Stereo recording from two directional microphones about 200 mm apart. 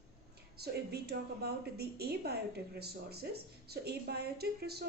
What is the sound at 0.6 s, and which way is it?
A woman's voice, 55° right (ahead or behind).